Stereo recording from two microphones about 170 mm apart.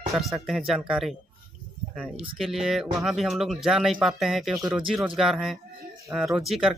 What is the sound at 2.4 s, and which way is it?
Speech, centre (ahead or behind).